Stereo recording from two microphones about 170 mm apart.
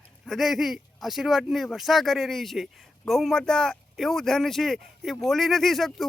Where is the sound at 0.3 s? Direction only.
Centre (ahead or behind).